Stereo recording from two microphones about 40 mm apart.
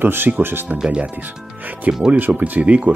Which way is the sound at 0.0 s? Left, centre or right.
Right.